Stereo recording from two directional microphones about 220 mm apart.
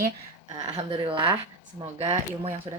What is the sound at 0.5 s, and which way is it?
Speech, 30° right (ahead or behind).